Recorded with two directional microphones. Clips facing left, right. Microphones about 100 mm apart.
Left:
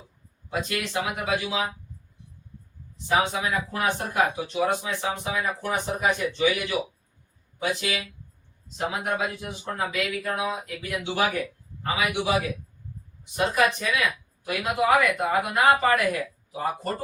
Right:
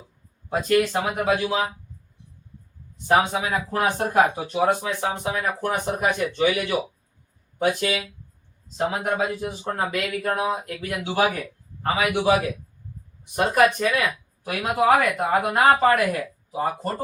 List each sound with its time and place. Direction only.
0.7 s speech: 45° right (ahead or behind)
3.1 s speech: 45° right (ahead or behind)
9.0 s speech: 40° right (ahead or behind)
13.3 s speech: 50° right (ahead or behind)
16.5 s speech: 30° right (ahead or behind)